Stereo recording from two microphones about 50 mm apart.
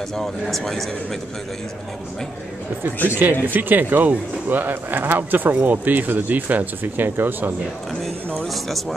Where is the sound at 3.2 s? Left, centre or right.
Right.